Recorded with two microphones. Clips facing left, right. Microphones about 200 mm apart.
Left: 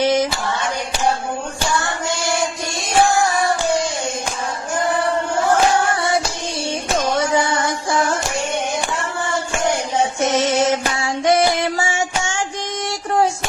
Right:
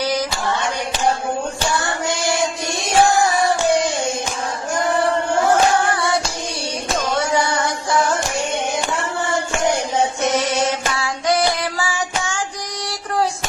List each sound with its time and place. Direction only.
0.0 s a sound: 25° left (ahead or behind)
7.0 s music: 20° left (ahead or behind)
10.2 s music: 25° left (ahead or behind)
10.9 s child singing: 25° left (ahead or behind)